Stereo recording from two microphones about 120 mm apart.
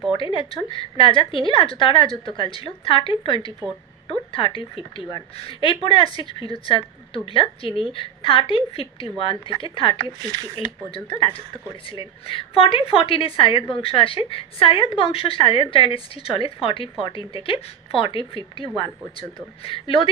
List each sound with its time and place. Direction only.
0.1 s a woman's voice: 45° left (ahead or behind)